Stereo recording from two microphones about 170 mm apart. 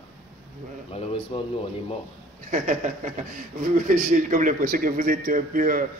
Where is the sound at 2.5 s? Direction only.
45° right (ahead or behind).